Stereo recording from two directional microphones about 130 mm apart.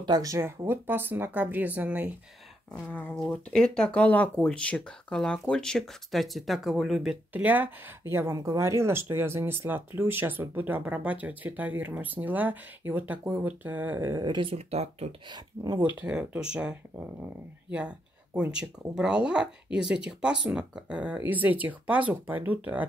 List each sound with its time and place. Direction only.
0.0 s speech: 30° right (ahead or behind); by 2.0 s 15° right (ahead or behind)
2.9 s speech: 10° left (ahead or behind); by 14.2 s 20° right (ahead or behind)
14.2 s speech: 40° right (ahead or behind); by 15.0 s 55° right (ahead or behind)
15.2 s speech: 35° right (ahead or behind)
16.0 s speech: 5° right (ahead or behind)
17.6 s speech: 10° right (ahead or behind)